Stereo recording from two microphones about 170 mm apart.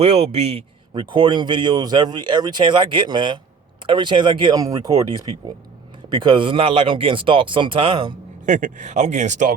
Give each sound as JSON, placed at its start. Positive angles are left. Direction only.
{"t": 0.0, "sound": "speech", "side_deg": -35}
{"t": 8.4, "sound": "speech", "side_deg": -45}